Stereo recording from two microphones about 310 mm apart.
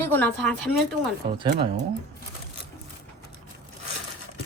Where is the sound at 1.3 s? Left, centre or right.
Centre.